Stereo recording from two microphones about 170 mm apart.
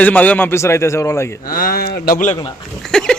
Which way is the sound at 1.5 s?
55° left (ahead or behind).